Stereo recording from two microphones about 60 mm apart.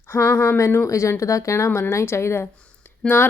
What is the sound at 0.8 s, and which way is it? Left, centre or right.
A woman's voice, left.